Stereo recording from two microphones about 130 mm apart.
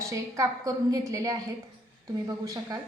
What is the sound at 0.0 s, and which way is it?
A woman's voice, 25° right (ahead or behind).